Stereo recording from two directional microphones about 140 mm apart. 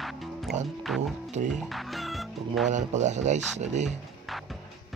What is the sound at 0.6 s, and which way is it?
Speech, centre (ahead or behind).